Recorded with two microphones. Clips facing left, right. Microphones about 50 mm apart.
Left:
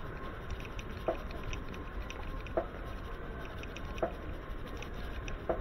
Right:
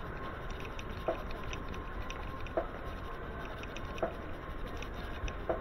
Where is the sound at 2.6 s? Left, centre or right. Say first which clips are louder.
Left 1 dB; centre.